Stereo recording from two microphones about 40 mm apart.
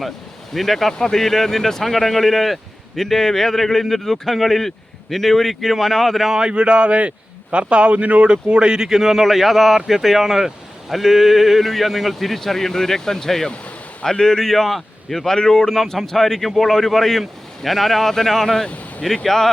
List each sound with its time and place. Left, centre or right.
0.5 s speech: centre
6.5 s speech: right
8.9 s speech: centre